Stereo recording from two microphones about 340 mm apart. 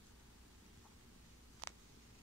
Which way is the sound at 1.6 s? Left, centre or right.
Right.